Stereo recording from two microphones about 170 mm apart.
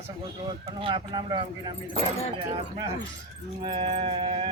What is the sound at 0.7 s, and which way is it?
Speech, 25° right (ahead or behind).